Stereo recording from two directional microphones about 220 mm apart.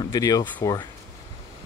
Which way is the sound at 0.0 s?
15° left (ahead or behind).